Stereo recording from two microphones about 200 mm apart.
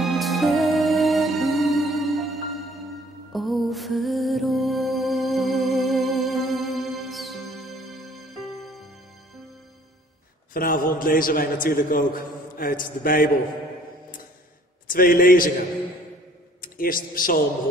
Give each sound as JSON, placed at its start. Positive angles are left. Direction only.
{"t": 0.0, "sound": "music", "side_deg": 0}
{"t": 10.5, "sound": "a man's voice", "side_deg": 45}
{"t": 14.9, "sound": "a man's voice", "side_deg": 45}
{"t": 16.6, "sound": "a man's voice", "side_deg": 45}